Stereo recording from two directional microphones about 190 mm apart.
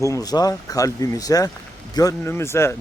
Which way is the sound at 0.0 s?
15° left (ahead or behind).